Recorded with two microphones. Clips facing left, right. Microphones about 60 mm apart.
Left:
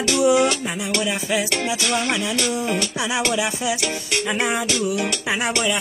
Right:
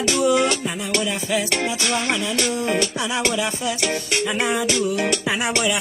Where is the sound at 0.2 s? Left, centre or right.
Centre.